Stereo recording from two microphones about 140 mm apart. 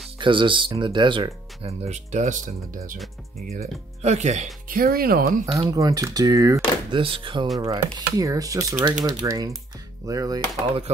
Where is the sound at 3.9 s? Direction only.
55° right (ahead or behind); by 5.4 s 90° right.